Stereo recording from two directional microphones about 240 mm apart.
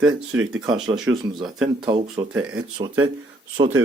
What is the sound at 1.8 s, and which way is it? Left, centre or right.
Speech, centre.